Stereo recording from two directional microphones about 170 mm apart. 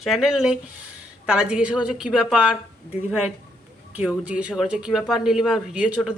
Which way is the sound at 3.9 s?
5° right (ahead or behind).